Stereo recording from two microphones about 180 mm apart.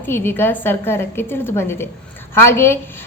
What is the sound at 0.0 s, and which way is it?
A woman's voice, 10° left (ahead or behind).